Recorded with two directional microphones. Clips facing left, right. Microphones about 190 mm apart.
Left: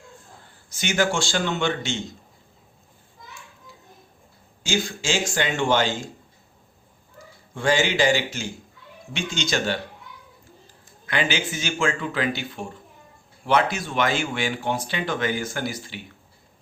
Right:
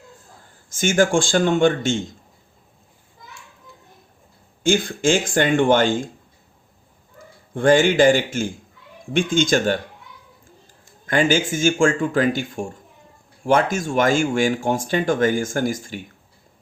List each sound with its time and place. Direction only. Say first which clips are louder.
0.7 s speech: right 6 dB; 50° right (ahead or behind)
4.6 s speech: right 8 dB; 55° right (ahead or behind)
7.2 s speech: right 8 dB; 55° right (ahead or behind)
11.0 s speech: right 7 dB; 45° right (ahead or behind)